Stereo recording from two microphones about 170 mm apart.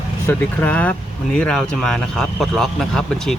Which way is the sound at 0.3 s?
10° left (ahead or behind).